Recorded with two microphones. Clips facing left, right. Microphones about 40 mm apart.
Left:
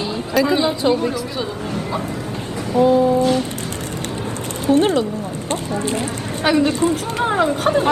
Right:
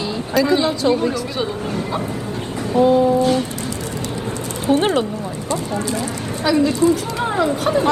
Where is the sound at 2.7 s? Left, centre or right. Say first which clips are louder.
Even; right.